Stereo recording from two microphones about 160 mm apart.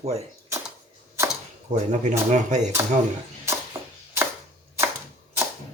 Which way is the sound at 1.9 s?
50° right (ahead or behind).